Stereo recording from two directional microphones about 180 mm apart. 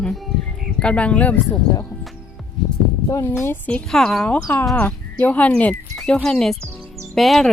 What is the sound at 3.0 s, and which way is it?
Speech, 15° left (ahead or behind).